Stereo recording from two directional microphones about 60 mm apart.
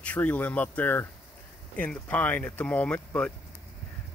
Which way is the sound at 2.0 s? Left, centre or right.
Left.